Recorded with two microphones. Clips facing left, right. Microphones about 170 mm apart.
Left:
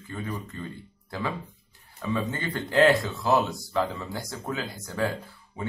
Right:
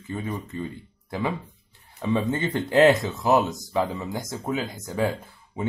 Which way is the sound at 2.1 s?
20° right (ahead or behind).